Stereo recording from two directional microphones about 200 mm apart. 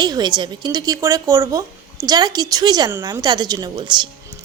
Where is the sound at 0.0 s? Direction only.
20° right (ahead or behind).